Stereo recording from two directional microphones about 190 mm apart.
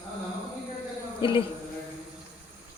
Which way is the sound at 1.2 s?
25° left (ahead or behind).